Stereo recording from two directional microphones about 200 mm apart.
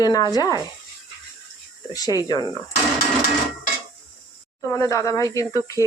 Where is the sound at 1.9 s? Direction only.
20° left (ahead or behind).